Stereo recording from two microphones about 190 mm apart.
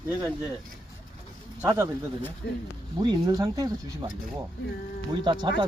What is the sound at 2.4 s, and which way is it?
Speech, 65° left (ahead or behind).